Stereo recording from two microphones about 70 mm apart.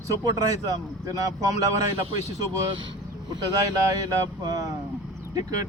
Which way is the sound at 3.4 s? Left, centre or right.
Right.